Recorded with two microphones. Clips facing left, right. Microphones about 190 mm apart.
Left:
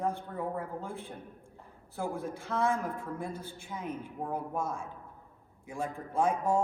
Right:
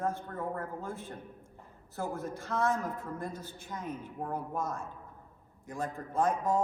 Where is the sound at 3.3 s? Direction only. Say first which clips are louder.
Left 2 dB; 55° left (ahead or behind).